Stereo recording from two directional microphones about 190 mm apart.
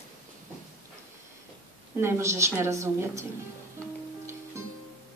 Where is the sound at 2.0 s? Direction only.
15° right (ahead or behind).